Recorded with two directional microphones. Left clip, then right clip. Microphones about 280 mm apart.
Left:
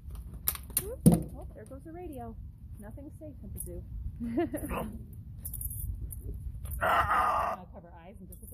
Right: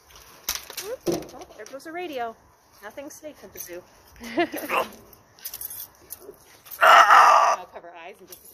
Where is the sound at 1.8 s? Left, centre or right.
Right.